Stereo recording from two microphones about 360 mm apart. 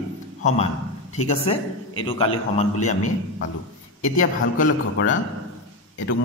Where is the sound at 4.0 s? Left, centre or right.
Left.